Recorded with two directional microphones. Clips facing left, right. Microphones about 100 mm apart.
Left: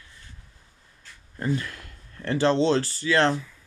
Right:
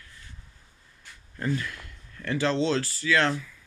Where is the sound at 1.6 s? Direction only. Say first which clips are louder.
Even; 35° left (ahead or behind).